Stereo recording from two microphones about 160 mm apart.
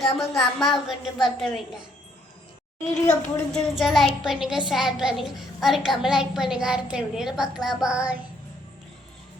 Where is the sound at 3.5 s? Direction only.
Centre (ahead or behind).